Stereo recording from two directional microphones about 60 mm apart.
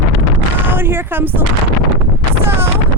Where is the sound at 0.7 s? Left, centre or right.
Right.